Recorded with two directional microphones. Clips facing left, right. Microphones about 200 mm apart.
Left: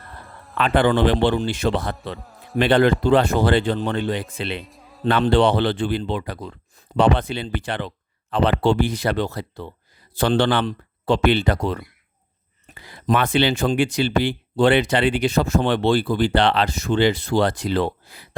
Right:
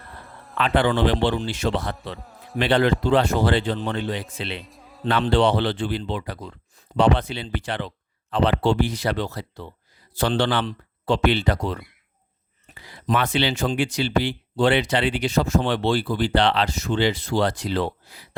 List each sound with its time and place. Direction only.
0.6 s a man's voice: 50° left (ahead or behind)
2.1 s music: centre (ahead or behind)
2.6 s a man's voice: 50° left (ahead or behind)
4.6 s music: centre (ahead or behind)
5.0 s speech: 50° left (ahead or behind)
12.9 s speech: 55° left (ahead or behind)